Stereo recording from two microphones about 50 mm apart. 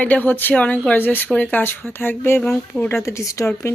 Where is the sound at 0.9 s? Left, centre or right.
Left.